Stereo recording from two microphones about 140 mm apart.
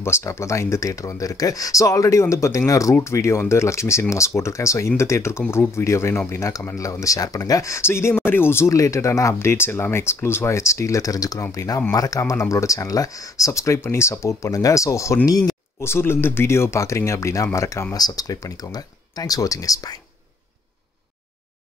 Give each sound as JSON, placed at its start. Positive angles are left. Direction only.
{"t": 0.0, "sound": "speech", "side_deg": 20}